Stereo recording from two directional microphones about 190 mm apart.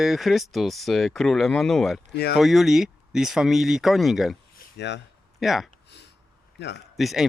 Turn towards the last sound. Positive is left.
turn(degrees=0)  # may be behind; listen again after turning